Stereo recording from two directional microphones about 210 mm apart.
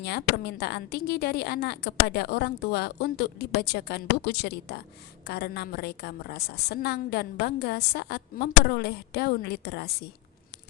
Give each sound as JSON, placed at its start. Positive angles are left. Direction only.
{"t": 0.0, "sound": "a woman's voice", "side_deg": 50}